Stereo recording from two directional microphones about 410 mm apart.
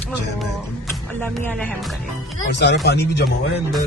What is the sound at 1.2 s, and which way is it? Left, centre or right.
Speech, centre.